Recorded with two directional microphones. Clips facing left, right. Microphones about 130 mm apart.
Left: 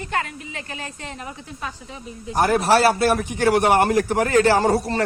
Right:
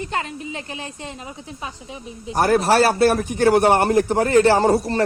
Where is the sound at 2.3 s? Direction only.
40° right (ahead or behind).